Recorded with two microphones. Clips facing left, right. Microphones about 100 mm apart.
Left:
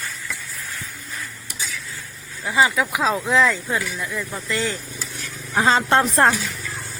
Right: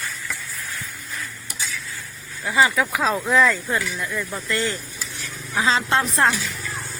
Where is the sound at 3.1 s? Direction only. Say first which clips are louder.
Right 1 dB; centre (ahead or behind).